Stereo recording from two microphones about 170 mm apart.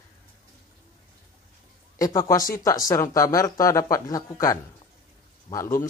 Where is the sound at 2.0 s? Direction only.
20° left (ahead or behind).